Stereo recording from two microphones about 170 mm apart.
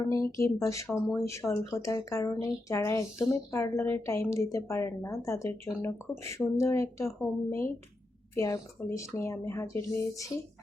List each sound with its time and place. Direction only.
0.1 s speech: 15° left (ahead or behind)